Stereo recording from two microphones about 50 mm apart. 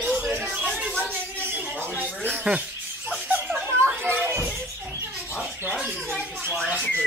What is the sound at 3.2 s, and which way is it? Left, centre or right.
Snicker, right.